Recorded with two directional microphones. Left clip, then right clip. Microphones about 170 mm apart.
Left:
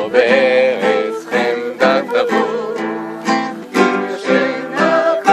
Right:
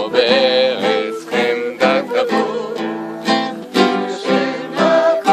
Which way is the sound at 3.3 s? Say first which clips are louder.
Even; 30° right (ahead or behind).